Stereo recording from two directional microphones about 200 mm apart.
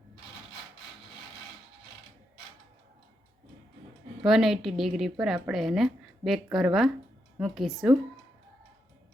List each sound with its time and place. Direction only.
4.2 s a woman's voice: centre (ahead or behind)